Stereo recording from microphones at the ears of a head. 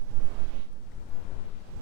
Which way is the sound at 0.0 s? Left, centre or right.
Right.